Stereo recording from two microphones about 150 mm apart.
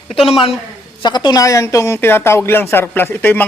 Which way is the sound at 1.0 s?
30° left (ahead or behind).